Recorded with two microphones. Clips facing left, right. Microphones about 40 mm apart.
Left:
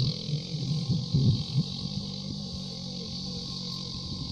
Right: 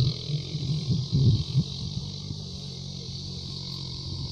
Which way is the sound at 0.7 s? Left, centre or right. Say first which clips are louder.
Right 1 dB; right.